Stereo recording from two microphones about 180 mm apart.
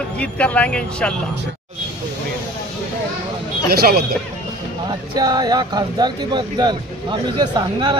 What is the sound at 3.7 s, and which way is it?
Speech, 60° right (ahead or behind).